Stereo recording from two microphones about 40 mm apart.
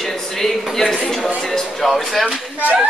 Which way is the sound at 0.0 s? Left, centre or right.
Centre.